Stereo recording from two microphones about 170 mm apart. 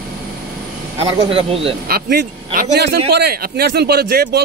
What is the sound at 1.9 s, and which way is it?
Speech, 60° right (ahead or behind).